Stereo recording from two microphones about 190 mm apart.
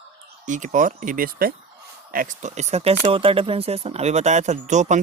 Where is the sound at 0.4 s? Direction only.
40° right (ahead or behind).